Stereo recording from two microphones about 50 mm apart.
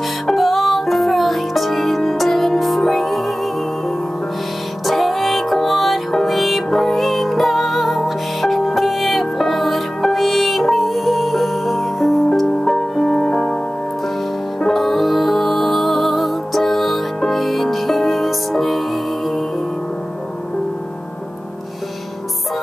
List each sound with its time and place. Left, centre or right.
0.0 s music: centre
4.8 s music: centre
14.6 s music: centre